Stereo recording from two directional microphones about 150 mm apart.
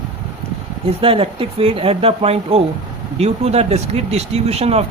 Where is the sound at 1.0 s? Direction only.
40° right (ahead or behind).